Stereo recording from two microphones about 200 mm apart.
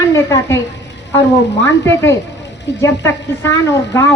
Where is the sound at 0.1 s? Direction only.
15° left (ahead or behind).